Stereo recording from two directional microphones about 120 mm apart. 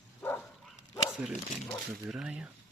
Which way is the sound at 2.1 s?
5° right (ahead or behind).